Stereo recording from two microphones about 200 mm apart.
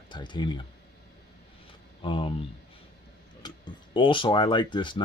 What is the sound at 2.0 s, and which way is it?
Speech, 25° left (ahead or behind).